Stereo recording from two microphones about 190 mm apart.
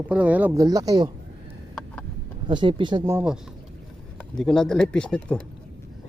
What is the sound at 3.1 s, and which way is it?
Speech, 5° right (ahead or behind).